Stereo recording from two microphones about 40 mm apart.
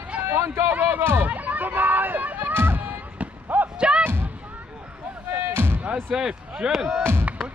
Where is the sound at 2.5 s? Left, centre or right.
Right.